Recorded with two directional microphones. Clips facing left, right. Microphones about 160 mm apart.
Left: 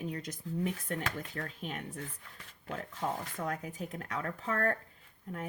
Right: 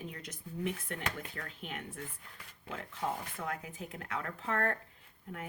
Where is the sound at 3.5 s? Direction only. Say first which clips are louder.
Left 3 dB; 40° left (ahead or behind).